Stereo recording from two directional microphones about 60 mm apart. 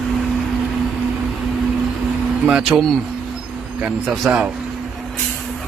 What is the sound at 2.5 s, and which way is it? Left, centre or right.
Speech, centre.